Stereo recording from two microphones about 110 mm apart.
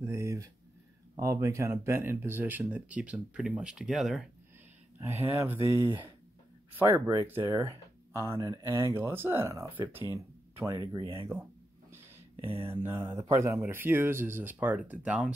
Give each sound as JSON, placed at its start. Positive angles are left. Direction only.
{"t": 0.0, "sound": "a sound", "side_deg": -25}
{"t": 1.1, "sound": "speech", "side_deg": -30}
{"t": 4.9, "sound": "speech", "side_deg": -20}
{"t": 10.7, "sound": "speech", "side_deg": -35}
{"t": 12.4, "sound": "mantra", "side_deg": -55}
{"t": 13.0, "sound": "speech", "side_deg": -40}
{"t": 13.3, "sound": "speech", "side_deg": -25}